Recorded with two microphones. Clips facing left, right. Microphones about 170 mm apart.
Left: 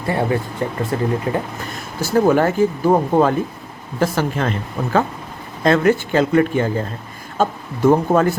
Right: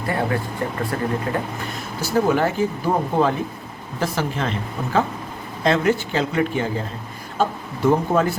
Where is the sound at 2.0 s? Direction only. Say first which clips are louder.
Left 4 dB; 50° left (ahead or behind).